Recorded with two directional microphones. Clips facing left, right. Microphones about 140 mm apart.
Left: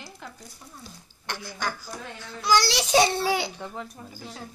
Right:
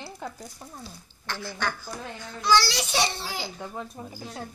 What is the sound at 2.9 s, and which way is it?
Speech, 65° left (ahead or behind).